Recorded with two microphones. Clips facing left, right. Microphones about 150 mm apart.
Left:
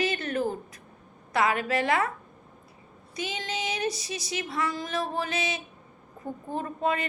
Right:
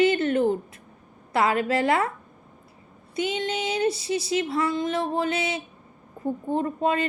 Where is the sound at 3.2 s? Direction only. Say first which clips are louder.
Right 7 dB; 25° right (ahead or behind).